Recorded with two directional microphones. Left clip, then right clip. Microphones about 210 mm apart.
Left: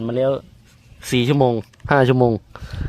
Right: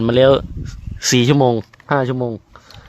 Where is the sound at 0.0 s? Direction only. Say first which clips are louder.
Right 8 dB; 35° right (ahead or behind).